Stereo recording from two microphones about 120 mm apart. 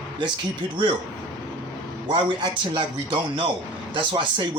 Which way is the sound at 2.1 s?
40° right (ahead or behind).